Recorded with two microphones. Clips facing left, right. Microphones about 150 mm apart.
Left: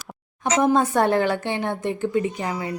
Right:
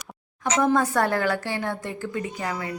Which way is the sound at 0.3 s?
20° left (ahead or behind).